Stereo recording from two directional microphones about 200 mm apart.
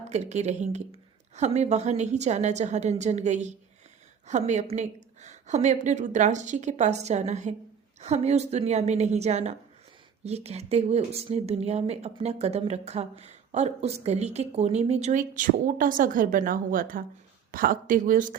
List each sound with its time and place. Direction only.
0.1 s speech: 35° right (ahead or behind)